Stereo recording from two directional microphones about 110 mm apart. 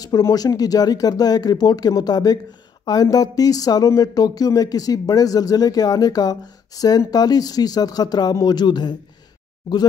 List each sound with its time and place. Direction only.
0.0 s speech: 35° left (ahead or behind)